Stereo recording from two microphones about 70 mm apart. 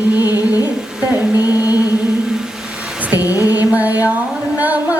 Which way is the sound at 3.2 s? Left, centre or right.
Left.